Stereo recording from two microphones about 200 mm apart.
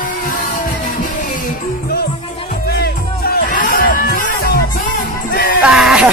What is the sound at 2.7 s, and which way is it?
Music, 50° left (ahead or behind).